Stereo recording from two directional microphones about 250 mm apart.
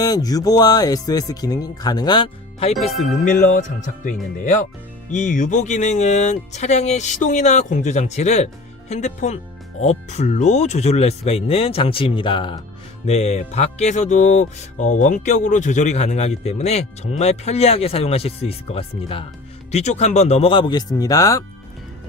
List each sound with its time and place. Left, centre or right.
0.0 s speech: centre